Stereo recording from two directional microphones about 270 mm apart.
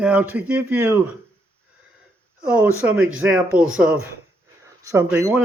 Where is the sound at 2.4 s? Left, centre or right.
Centre.